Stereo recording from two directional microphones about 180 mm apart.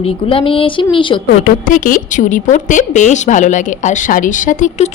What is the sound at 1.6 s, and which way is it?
A woman's voice, 45° left (ahead or behind).